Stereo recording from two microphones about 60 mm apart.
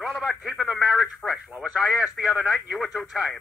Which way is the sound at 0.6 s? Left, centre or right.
Centre.